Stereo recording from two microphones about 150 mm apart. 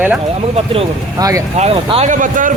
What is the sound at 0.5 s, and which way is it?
Speech, 40° right (ahead or behind).